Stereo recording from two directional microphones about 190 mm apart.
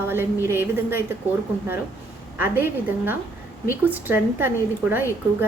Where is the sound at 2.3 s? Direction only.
10° right (ahead or behind).